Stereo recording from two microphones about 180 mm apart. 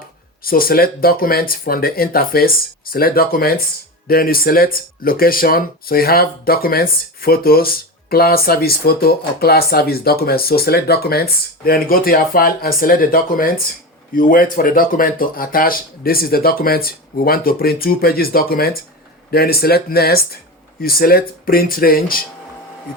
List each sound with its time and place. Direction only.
0.4 s speech: 55° left (ahead or behind)